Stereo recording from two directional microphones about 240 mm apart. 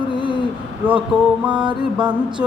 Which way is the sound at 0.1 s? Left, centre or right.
Left.